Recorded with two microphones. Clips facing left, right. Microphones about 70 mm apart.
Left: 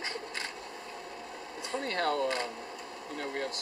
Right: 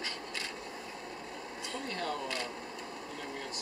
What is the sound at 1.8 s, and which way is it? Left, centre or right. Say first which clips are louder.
Speech: left 8 dB; left.